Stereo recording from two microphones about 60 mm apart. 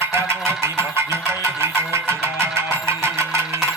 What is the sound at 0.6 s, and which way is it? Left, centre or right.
Speech, right.